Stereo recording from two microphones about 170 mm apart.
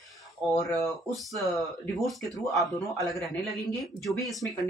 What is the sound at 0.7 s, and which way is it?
Speech, centre (ahead or behind).